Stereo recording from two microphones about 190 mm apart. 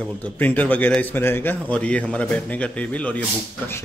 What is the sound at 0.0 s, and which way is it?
A man's voice, 10° left (ahead or behind).